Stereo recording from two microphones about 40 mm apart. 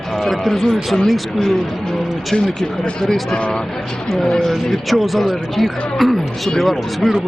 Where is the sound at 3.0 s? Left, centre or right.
Centre.